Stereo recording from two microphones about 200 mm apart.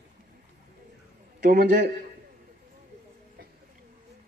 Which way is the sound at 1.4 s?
50° right (ahead or behind).